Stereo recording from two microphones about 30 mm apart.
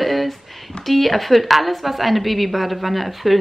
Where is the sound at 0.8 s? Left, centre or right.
Centre.